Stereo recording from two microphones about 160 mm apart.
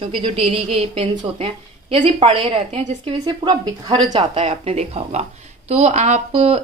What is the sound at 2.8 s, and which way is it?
Speech, 50° right (ahead or behind).